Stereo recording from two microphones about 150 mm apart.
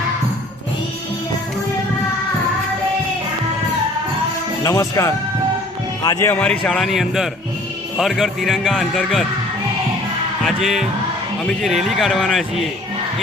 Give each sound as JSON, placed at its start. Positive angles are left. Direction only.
{"t": 4.6, "sound": "speech", "side_deg": 20}
{"t": 6.1, "sound": "a man's voice", "side_deg": 10}
{"t": 10.4, "sound": "a man's voice", "side_deg": 0}